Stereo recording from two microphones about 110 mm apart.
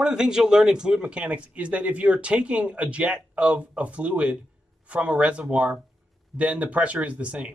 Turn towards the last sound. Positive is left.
turn(degrees=-10)  # may be behind; listen again after turning